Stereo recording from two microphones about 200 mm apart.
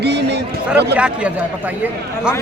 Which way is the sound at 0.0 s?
55° right (ahead or behind).